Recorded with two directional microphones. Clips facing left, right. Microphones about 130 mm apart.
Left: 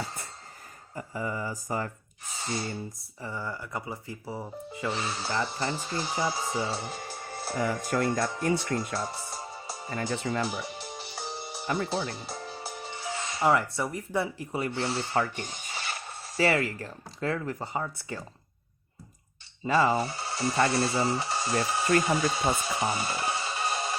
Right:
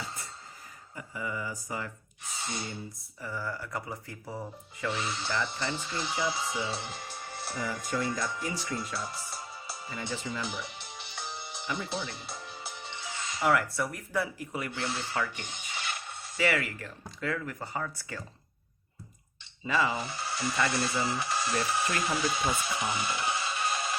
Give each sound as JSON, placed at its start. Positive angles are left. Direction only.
{"t": 0.9, "sound": "speech", "side_deg": 40}
{"t": 3.2, "sound": "speech", "side_deg": 25}
{"t": 4.4, "sound": "speech", "side_deg": 30}
{"t": 7.5, "sound": "speech", "side_deg": 55}
{"t": 19.6, "sound": "speech", "side_deg": 40}